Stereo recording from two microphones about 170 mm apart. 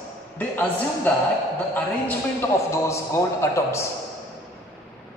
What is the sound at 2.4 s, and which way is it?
A man's voice, 15° left (ahead or behind).